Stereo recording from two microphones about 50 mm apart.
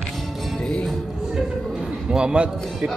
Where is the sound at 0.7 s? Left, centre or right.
Centre.